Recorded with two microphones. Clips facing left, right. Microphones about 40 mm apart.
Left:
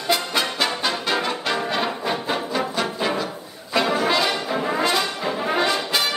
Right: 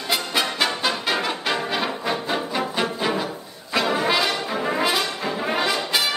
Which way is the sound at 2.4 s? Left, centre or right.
Centre.